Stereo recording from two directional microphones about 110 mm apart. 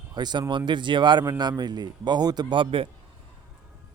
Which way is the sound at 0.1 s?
40° right (ahead or behind).